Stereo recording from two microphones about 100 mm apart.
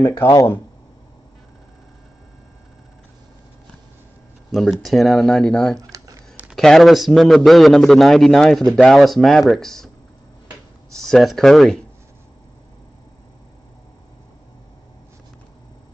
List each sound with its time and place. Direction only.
0.3 s speech: 35° left (ahead or behind)
4.5 s a man's voice: centre (ahead or behind)
5.8 s computer keyboard: 35° right (ahead or behind)
6.5 s a man's voice: 5° left (ahead or behind)
11.0 s a man's voice: 5° left (ahead or behind)